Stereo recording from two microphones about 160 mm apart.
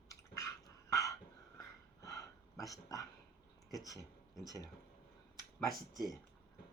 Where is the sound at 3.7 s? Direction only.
20° left (ahead or behind).